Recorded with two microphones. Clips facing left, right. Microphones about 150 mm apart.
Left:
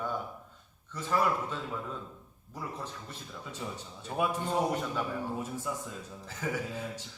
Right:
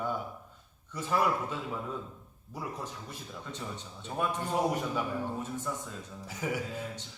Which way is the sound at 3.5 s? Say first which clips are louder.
Left 2 dB; 10° left (ahead or behind).